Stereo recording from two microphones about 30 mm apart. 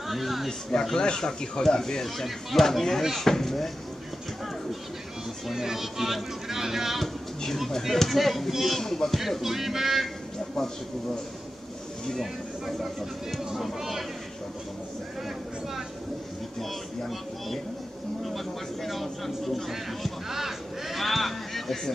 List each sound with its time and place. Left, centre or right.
0.1 s speech: centre
0.5 s speech: left
2.0 s speech: centre
5.5 s speech: centre
7.0 s speech: centre
8.8 s speech: centre
9.4 s speech: centre
13.6 s speech: centre
16.5 s speech: centre
18.2 s speech: centre
20.2 s crow: centre